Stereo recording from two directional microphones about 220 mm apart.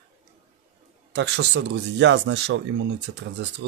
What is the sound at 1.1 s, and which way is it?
Speech, 55° right (ahead or behind).